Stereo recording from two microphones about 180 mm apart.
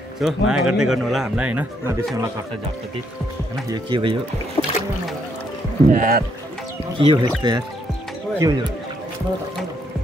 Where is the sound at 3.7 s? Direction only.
25° right (ahead or behind).